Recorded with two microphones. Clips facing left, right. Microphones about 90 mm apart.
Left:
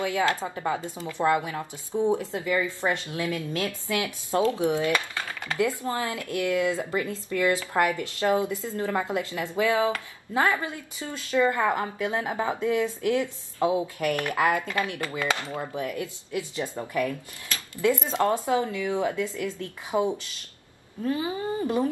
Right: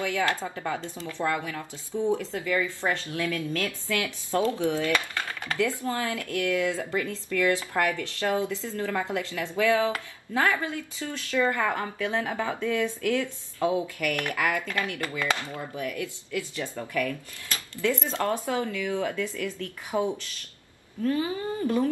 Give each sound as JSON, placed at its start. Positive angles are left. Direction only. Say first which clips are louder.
{"t": 0.0, "sound": "speech", "louder": "left 2 dB", "side_deg": 20}